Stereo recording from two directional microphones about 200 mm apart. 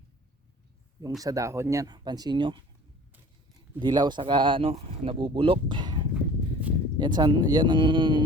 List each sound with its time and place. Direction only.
1.2 s speech: 15° right (ahead or behind)
3.8 s speech: 20° right (ahead or behind)
6.1 s a sound: 5° right (ahead or behind)
7.0 s speech: 20° right (ahead or behind)